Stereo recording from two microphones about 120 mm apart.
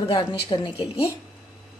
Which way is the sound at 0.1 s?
45° left (ahead or behind).